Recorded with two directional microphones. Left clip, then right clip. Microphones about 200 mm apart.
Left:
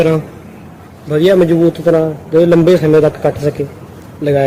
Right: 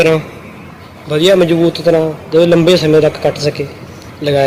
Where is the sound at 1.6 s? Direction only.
20° left (ahead or behind).